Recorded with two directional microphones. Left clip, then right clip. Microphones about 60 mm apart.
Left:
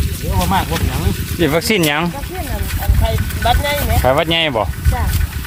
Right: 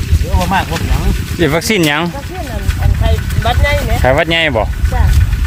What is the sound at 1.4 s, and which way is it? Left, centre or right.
Speech, right.